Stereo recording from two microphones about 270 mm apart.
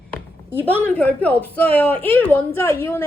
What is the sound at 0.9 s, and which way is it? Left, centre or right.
A woman's voice, centre.